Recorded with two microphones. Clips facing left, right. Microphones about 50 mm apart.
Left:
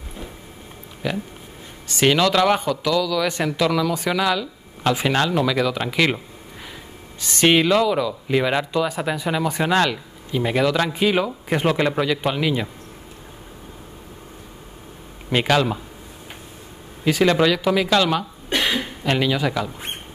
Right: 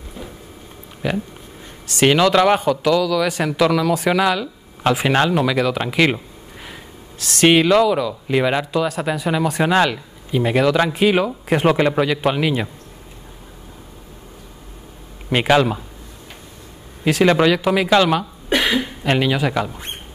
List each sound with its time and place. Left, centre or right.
1.0 s a man's voice: centre
7.2 s speech: centre
7.4 s a man's voice: centre
15.3 s a man's voice: centre
17.2 s a man's voice: centre